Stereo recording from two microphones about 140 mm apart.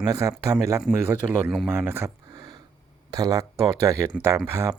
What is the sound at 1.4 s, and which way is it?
Speech, centre (ahead or behind).